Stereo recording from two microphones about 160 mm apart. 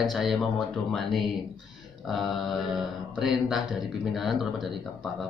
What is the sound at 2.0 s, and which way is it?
Speech, centre (ahead or behind).